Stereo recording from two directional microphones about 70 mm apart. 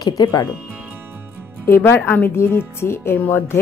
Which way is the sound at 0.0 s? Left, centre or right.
Left.